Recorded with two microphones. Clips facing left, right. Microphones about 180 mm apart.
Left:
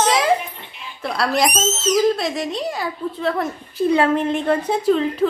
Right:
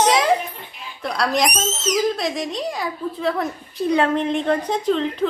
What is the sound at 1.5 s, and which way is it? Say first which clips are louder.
Speech: left 3 dB; 10° right (ahead or behind).